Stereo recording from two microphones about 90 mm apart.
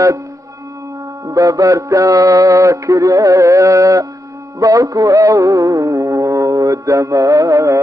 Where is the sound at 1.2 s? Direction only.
40° right (ahead or behind).